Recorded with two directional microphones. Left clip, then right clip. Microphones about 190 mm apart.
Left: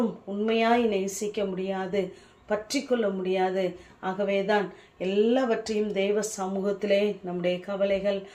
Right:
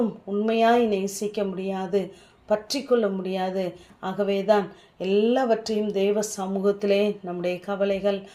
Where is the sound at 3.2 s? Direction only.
40° right (ahead or behind).